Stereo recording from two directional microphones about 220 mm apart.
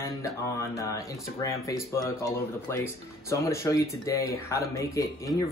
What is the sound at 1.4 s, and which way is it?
Speech, 15° left (ahead or behind).